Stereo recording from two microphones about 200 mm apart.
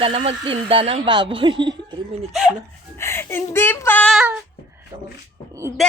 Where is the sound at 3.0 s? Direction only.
10° left (ahead or behind).